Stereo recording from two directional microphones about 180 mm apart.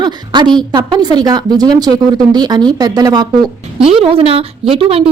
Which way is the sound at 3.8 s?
30° right (ahead or behind).